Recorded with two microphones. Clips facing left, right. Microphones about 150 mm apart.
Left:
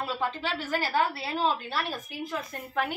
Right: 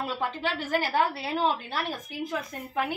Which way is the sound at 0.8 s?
15° right (ahead or behind).